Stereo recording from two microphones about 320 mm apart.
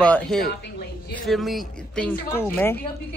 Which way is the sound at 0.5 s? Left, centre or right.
Left.